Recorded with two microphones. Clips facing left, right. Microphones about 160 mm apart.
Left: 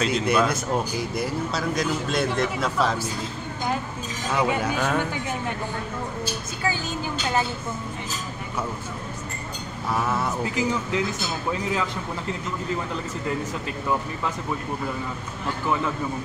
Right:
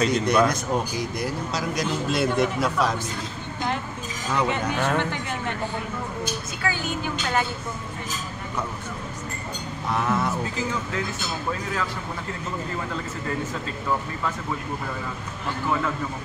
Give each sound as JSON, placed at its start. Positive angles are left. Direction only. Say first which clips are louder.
{"t": 0.0, "sound": "speech", "louder": "right 2 dB", "side_deg": 5}
{"t": 4.3, "sound": "speech", "louder": "left 1 dB", "side_deg": 10}
{"t": 9.8, "sound": "speech", "louder": "right 1 dB", "side_deg": 5}
{"t": 10.4, "sound": "speech", "louder": "left 3 dB", "side_deg": 15}